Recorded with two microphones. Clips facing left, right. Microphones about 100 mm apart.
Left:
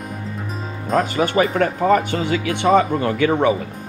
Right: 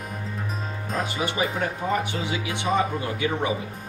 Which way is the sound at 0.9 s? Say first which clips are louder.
Left 10 dB; 50° left (ahead or behind).